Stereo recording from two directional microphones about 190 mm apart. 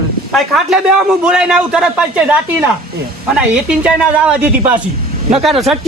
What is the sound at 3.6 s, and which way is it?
A man's voice, 5° right (ahead or behind).